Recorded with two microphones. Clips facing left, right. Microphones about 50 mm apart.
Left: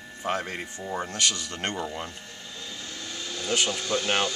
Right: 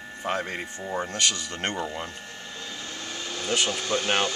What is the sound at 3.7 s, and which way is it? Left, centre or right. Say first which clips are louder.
Speech: right 1 dB; right.